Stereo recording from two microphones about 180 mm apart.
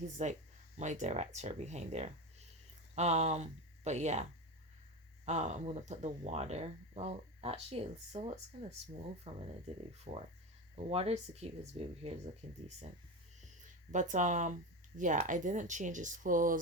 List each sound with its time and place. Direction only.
0.2 s speech: 40° right (ahead or behind)
13.9 s speech: 45° right (ahead or behind)